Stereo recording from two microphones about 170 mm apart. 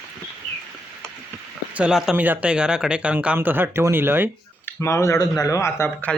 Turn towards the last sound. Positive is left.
turn(degrees=10)  # may be behind; listen again after turning